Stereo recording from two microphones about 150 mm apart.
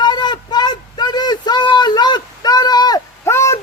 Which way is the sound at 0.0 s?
30° left (ahead or behind).